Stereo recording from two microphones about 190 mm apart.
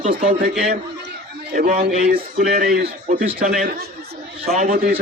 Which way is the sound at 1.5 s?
50° right (ahead or behind).